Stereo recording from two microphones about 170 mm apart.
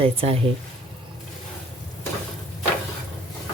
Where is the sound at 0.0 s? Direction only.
35° right (ahead or behind).